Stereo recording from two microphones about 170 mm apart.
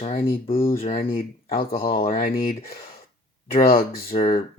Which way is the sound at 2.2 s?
60° left (ahead or behind).